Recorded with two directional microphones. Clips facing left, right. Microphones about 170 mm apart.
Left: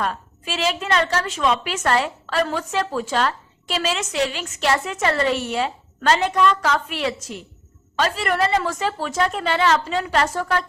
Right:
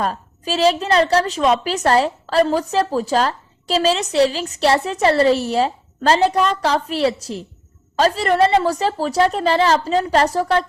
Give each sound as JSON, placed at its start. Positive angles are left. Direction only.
{"t": 0.0, "sound": "a woman's voice", "side_deg": -35}